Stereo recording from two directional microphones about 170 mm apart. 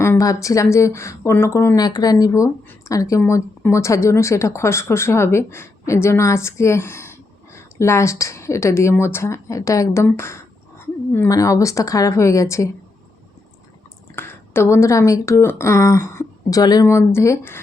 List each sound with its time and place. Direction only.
0.0 s a woman's voice: 15° left (ahead or behind)
14.2 s speech: 15° left (ahead or behind)